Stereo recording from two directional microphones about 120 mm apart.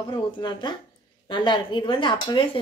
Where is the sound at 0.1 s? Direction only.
40° left (ahead or behind).